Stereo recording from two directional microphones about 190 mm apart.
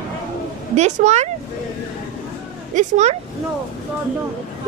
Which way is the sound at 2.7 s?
40° right (ahead or behind).